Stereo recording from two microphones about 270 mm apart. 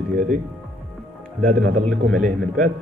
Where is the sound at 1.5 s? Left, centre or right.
Right.